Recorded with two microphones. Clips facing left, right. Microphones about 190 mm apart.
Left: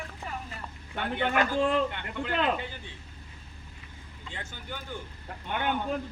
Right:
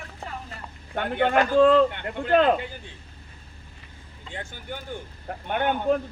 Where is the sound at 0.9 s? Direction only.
50° right (ahead or behind).